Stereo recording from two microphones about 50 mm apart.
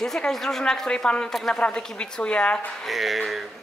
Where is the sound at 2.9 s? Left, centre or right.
Centre.